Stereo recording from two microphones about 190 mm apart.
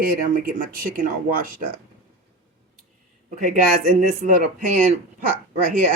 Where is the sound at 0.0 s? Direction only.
50° right (ahead or behind).